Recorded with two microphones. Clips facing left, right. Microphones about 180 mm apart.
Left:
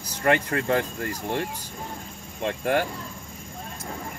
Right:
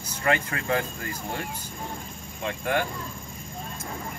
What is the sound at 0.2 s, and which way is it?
Speech, 40° left (ahead or behind).